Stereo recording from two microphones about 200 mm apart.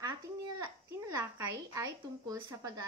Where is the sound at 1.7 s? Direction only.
20° right (ahead or behind).